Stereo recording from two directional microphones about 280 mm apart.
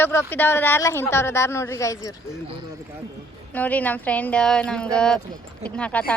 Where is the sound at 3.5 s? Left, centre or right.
Centre.